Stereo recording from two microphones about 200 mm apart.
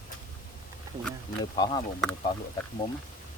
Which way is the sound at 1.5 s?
20° left (ahead or behind).